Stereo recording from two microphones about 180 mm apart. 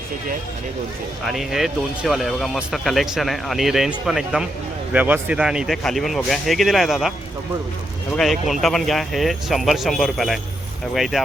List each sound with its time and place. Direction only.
1.2 s speech: centre (ahead or behind)
8.1 s speech: centre (ahead or behind)